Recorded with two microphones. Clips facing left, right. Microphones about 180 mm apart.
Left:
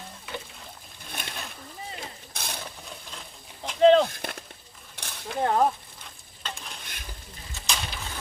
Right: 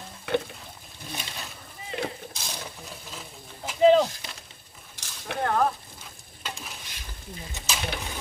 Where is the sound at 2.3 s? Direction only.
60° left (ahead or behind).